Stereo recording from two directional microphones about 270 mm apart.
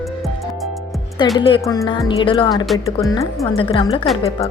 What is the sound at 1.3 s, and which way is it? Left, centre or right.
Speech, centre.